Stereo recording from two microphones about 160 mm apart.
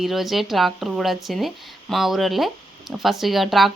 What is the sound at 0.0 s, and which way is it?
A woman's voice, centre (ahead or behind).